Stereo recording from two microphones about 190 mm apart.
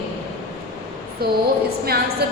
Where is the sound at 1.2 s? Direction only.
55° right (ahead or behind).